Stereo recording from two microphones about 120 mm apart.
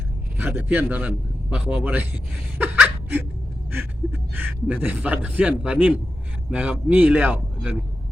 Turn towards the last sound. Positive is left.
turn(degrees=-10)  # may be behind; listen again after turning